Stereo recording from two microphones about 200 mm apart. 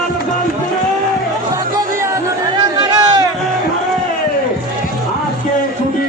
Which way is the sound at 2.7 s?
20° right (ahead or behind).